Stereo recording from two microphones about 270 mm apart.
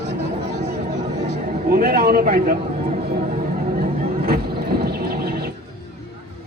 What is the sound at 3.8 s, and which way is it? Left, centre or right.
Neigh, right.